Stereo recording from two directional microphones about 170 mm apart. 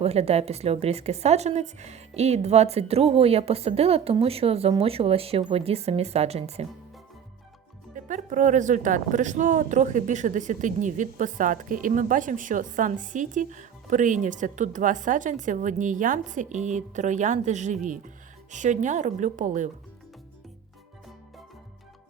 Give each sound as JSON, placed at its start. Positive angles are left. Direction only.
{"t": 0.0, "sound": "speech", "side_deg": -35}
{"t": 7.9, "sound": "speech", "side_deg": -45}